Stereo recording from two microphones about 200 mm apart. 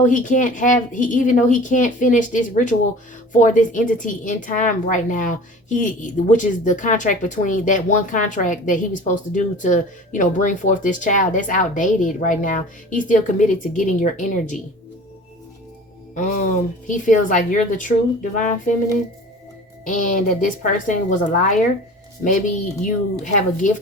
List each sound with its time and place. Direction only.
0.0 s a woman's voice: 40° left (ahead or behind)
16.1 s a woman's voice: 40° left (ahead or behind)
19.8 s a woman's voice: 40° left (ahead or behind)